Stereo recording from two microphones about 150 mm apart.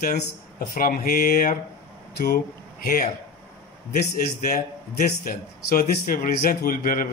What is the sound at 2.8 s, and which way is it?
A man's voice, 70° left (ahead or behind).